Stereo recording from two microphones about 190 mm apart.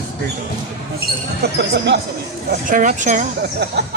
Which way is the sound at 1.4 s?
60° right (ahead or behind).